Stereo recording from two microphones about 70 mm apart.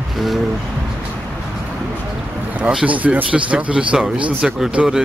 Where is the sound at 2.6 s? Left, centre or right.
Centre.